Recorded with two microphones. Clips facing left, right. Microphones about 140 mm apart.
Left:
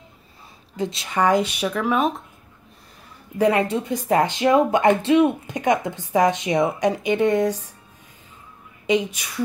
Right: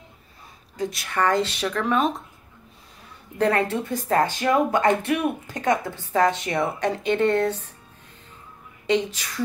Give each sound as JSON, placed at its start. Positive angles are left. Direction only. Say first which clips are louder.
{"t": 0.7, "sound": "speech", "louder": "left 2 dB", "side_deg": 25}
{"t": 3.3, "sound": "speech", "louder": "left 3 dB", "side_deg": 15}
{"t": 8.8, "sound": "speech", "louder": "left 2 dB", "side_deg": 10}